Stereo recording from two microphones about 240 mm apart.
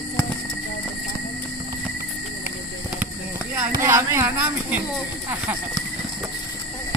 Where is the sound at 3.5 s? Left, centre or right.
Centre.